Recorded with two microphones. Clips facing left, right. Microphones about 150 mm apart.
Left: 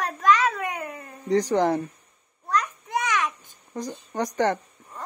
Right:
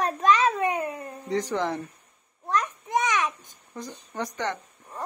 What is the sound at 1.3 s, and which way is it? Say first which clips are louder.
Speech: left 6 dB; 45° left (ahead or behind).